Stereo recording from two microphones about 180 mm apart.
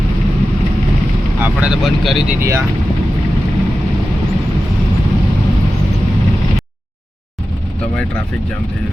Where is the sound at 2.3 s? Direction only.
15° right (ahead or behind).